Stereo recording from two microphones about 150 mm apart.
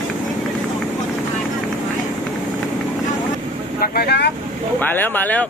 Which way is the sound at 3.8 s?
90° left.